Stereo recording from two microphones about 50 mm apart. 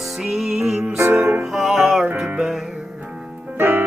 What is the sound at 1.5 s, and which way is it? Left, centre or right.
Music, centre.